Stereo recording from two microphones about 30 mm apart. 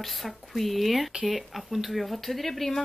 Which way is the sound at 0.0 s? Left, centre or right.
Centre.